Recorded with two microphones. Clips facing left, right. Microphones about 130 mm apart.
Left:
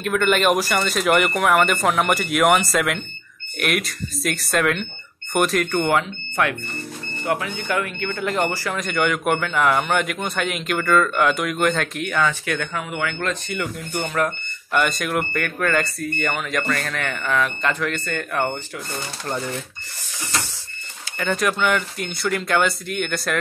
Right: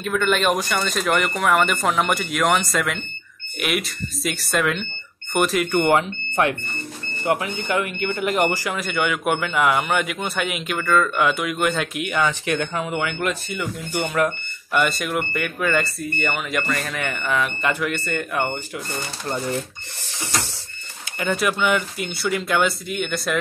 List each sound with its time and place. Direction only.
0.0 s speech: centre (ahead or behind); by 13.3 s 20° right (ahead or behind)
13.3 s speech: 5° right (ahead or behind)
21.3 s speech: 5° right (ahead or behind)